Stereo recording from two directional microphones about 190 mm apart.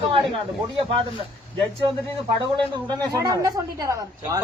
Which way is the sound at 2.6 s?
20° right (ahead or behind).